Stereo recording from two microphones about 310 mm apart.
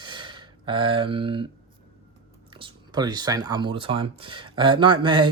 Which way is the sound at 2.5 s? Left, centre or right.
Centre.